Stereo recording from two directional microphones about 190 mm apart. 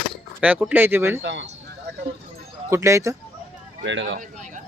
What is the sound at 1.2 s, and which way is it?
Speech, 70° right (ahead or behind).